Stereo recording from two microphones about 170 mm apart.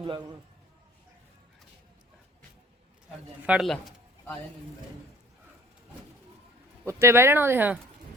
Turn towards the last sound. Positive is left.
turn(degrees=-10)  # may be behind; listen again after turning